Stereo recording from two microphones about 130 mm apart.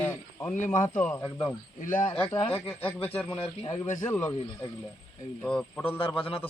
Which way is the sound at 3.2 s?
45° left (ahead or behind).